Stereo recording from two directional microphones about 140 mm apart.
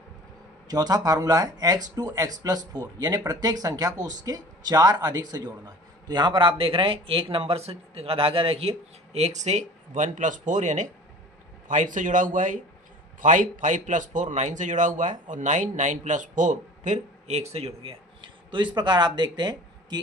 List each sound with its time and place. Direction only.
0.7 s a man's voice: 30° right (ahead or behind)